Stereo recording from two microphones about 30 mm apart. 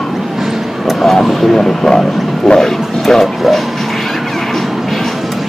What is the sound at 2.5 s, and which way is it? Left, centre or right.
Bow-wow, centre.